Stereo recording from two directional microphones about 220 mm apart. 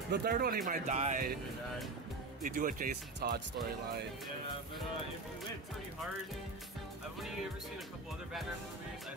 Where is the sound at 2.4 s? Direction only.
35° right (ahead or behind).